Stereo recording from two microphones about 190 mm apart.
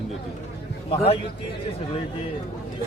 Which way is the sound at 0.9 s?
30° left (ahead or behind).